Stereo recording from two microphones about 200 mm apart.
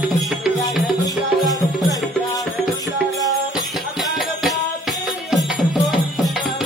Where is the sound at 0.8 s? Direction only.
Centre (ahead or behind).